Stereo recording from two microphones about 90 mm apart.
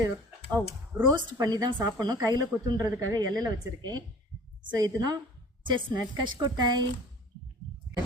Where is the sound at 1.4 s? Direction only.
45° right (ahead or behind).